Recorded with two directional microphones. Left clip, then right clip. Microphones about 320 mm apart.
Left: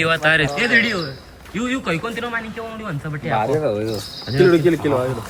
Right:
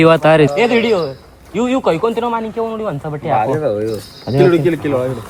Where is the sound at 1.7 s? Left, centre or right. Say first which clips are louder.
Right 8 dB; centre.